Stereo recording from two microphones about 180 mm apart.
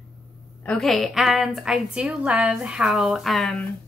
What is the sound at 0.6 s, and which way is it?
A woman's voice, centre (ahead or behind).